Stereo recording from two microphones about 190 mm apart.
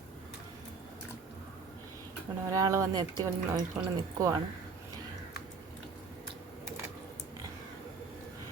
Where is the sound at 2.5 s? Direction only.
15° right (ahead or behind).